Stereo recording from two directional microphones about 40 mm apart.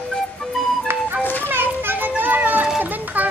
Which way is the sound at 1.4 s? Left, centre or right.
Right.